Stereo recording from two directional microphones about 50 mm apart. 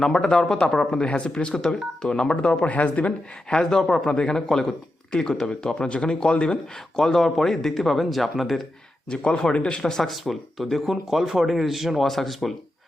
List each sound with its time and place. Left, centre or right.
0.0 s speech: centre
2.6 s speech: left
3.5 s speech: centre
9.0 s speech: centre
10.0 s speech: centre